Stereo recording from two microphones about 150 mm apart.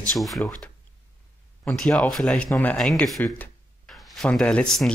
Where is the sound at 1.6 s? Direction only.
5° left (ahead or behind).